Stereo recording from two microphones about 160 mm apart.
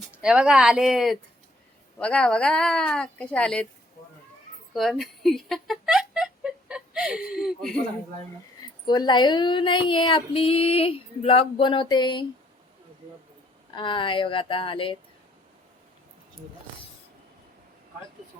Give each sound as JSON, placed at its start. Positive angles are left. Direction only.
{"t": 0.1, "sound": "speech", "side_deg": -5}
{"t": 4.7, "sound": "a sound", "side_deg": 0}
{"t": 8.9, "sound": "speech", "side_deg": 30}
{"t": 13.7, "sound": "speech", "side_deg": 30}